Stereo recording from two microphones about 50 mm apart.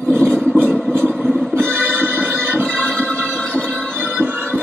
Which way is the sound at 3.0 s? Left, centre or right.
Left.